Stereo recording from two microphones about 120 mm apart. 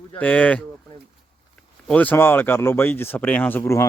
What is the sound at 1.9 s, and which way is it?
Speech, 15° left (ahead or behind).